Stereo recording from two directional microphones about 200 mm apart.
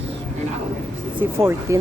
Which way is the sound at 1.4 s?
10° right (ahead or behind).